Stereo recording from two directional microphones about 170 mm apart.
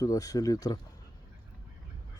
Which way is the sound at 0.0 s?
20° left (ahead or behind).